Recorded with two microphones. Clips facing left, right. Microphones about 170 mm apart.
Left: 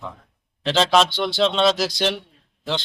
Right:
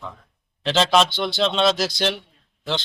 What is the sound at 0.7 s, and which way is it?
A man's voice, centre (ahead or behind).